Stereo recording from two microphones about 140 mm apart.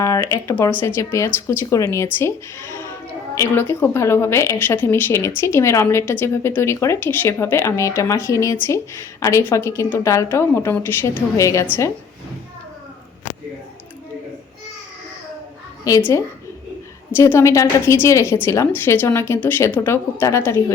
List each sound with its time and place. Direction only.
0.0 s a woman's voice: 20° left (ahead or behind)
3.3 s a woman's voice: 20° left (ahead or behind)
15.8 s a woman's voice: 20° left (ahead or behind)